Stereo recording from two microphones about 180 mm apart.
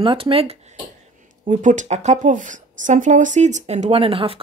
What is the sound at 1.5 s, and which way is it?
Speech, 45° right (ahead or behind).